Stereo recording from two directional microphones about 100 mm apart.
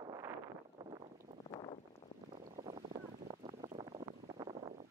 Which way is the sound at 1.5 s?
50° left (ahead or behind).